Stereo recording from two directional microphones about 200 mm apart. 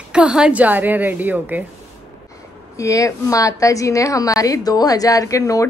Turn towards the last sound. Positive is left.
turn(degrees=15)  # may be behind; listen again after turning